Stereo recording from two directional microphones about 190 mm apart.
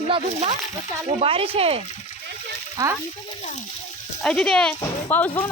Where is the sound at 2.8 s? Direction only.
20° right (ahead or behind).